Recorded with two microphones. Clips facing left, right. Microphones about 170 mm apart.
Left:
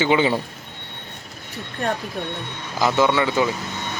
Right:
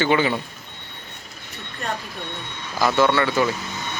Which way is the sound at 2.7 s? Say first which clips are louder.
Even; 15° left (ahead or behind).